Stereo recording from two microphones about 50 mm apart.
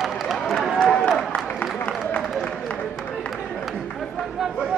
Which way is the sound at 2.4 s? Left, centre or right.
Left.